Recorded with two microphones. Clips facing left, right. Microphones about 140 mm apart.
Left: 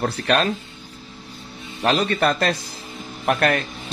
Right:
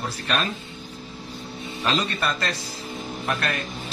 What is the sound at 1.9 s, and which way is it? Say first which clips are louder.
A man's voice: left 6 dB; 65° left (ahead or behind).